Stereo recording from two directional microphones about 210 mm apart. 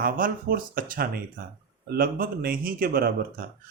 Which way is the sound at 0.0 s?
45° right (ahead or behind).